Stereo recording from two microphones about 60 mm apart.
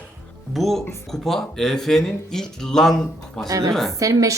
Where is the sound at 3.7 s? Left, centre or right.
Centre.